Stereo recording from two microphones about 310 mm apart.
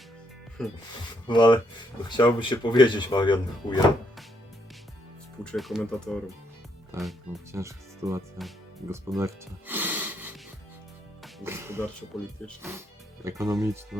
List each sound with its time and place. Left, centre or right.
1.3 s speech: centre
5.4 s speech: centre
11.2 s music: centre
12.1 s speech: centre